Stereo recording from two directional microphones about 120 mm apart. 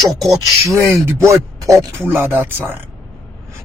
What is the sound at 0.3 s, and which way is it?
Speech, 30° right (ahead or behind).